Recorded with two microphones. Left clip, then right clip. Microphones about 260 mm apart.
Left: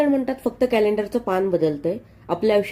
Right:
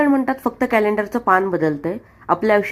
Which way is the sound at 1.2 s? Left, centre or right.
Centre.